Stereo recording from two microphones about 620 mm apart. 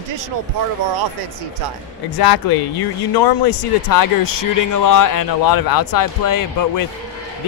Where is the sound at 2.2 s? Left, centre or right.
Left.